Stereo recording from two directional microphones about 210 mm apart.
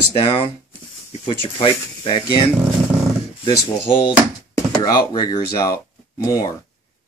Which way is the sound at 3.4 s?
25° left (ahead or behind).